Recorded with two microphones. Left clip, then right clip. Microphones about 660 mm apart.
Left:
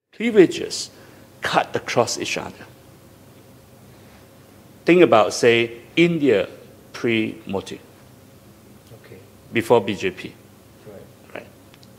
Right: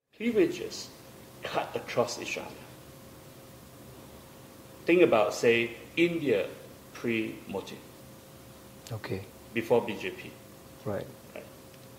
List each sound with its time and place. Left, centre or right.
0.2 s a man's voice: left
4.8 s a man's voice: left
9.5 s a man's voice: left